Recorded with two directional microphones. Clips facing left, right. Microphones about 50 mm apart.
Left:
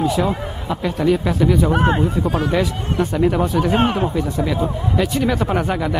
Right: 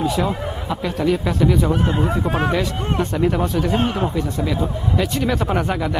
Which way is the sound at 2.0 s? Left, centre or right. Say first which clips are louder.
Even; right.